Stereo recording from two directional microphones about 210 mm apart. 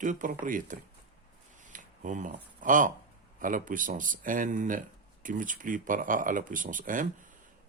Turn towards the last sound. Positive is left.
turn(degrees=-40)  # may be behind; listen again after turning